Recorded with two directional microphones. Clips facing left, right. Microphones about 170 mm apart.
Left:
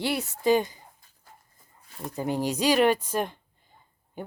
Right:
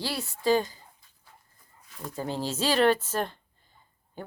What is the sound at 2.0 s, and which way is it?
Speech, 20° left (ahead or behind).